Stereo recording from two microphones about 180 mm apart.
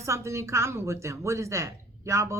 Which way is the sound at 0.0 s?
15° right (ahead or behind).